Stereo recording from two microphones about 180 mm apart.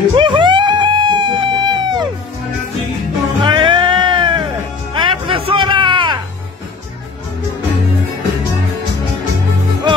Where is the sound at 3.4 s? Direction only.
30° right (ahead or behind).